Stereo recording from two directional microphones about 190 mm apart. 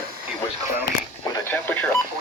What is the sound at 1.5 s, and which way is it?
Radio, 10° left (ahead or behind).